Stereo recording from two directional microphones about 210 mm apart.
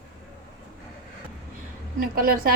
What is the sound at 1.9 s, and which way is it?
Speech, 45° right (ahead or behind).